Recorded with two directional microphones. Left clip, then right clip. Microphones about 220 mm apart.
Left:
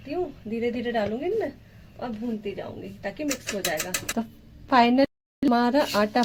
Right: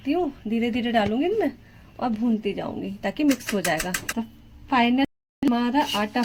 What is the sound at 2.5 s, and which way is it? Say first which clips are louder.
A woman's voice: right 5 dB; 55° right (ahead or behind).